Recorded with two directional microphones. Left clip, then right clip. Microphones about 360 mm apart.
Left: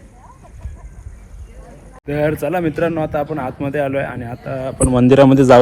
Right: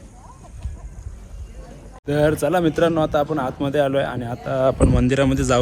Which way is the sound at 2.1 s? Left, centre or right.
Centre.